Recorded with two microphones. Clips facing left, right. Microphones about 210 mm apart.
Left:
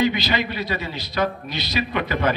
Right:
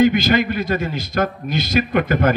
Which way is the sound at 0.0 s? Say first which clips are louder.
Right 7 dB; 50° right (ahead or behind).